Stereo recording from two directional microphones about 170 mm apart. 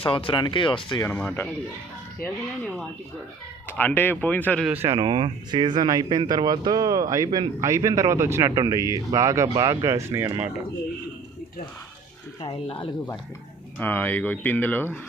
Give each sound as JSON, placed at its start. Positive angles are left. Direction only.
{"t": 0.0, "sound": "speech", "side_deg": 30}
{"t": 1.0, "sound": "speech", "side_deg": 10}
{"t": 4.6, "sound": "speech", "side_deg": -10}
{"t": 4.9, "sound": "speech", "side_deg": -30}
{"t": 12.4, "sound": "speech", "side_deg": 30}
{"t": 13.7, "sound": "speech", "side_deg": 10}